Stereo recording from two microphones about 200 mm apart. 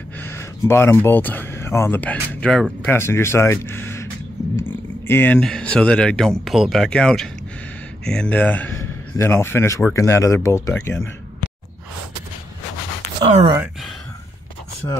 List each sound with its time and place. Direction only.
0.2 s a man's voice: 10° left (ahead or behind)
13.2 s speech: 30° right (ahead or behind)